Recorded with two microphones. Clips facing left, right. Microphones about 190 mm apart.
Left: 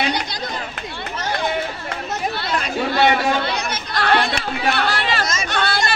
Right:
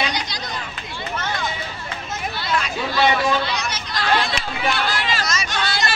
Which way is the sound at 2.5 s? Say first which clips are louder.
Left 1 dB; 55° left (ahead or behind).